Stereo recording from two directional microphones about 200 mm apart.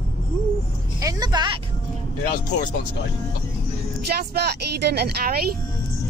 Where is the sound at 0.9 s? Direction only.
20° right (ahead or behind).